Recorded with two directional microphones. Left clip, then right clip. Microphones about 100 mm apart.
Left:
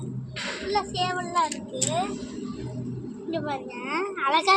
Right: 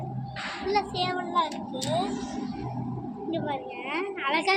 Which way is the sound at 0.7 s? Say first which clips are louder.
Even; 30° left (ahead or behind).